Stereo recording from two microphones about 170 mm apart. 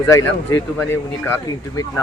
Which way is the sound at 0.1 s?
15° left (ahead or behind).